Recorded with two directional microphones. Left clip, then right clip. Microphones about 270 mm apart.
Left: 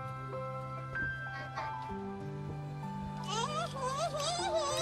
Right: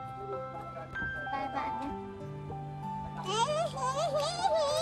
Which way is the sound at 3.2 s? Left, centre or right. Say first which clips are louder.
Right 6 dB; right.